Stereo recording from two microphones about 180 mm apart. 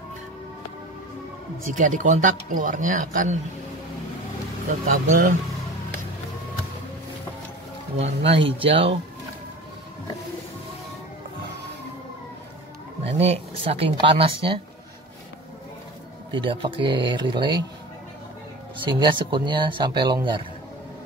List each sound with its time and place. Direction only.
1.7 s speech: 45° right (ahead or behind)
4.8 s speech: 50° right (ahead or behind)
8.0 s speech: 35° right (ahead or behind)
13.0 s speech: 35° right (ahead or behind)
16.3 s speech: 25° right (ahead or behind)
18.8 s speech: 25° right (ahead or behind)